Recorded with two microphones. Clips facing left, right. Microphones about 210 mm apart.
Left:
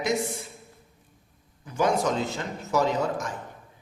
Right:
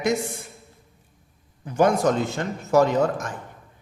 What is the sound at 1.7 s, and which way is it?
A man's voice, 55° right (ahead or behind).